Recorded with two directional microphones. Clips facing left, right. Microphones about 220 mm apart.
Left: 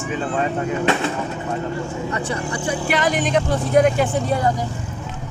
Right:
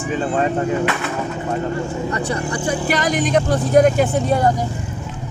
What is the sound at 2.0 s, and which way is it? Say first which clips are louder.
Speech: right 2 dB; 40° right (ahead or behind).